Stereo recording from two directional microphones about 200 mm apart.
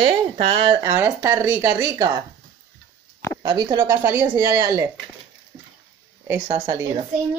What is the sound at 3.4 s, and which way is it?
Speech, 20° right (ahead or behind).